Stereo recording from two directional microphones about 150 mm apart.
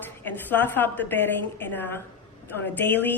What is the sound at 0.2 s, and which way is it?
A woman's voice, 10° left (ahead or behind).